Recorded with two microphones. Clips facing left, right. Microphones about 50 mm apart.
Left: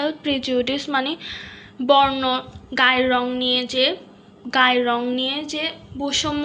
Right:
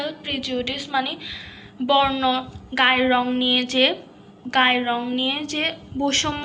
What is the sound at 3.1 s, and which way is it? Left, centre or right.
A woman's voice, right.